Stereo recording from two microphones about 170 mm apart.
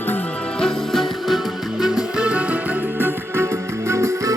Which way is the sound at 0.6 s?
Centre (ahead or behind).